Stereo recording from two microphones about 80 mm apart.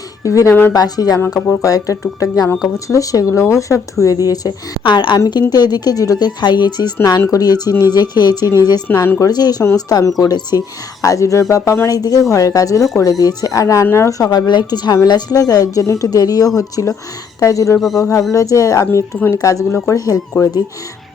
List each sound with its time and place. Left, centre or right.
0.2 s speech: left
0.7 s speech: left
4.8 s a woman's voice: left
5.3 s speech: left
7.3 s speech: left
8.9 s speech: left
9.3 s speech: left
11.0 s speech: left
11.9 s speech: left
17.7 s speech: centre
18.1 s speech: left